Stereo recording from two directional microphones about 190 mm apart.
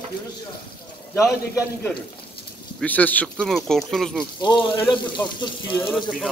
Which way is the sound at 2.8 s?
10° left (ahead or behind).